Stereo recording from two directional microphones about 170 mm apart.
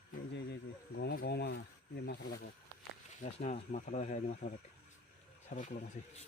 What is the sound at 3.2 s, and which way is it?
Speech, 45° left (ahead or behind).